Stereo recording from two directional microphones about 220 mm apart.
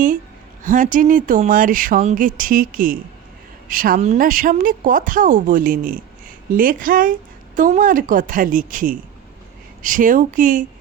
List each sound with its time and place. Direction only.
0.6 s a woman's voice: 35° right (ahead or behind)